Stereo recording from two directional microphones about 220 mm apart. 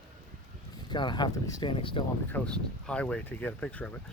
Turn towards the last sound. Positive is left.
turn(degrees=5)  # may be behind; listen again after turning